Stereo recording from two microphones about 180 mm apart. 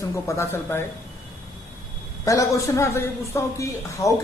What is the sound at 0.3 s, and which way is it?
Speech, 15° left (ahead or behind).